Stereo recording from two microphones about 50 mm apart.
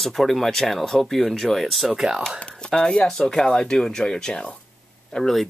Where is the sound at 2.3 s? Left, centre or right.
Centre.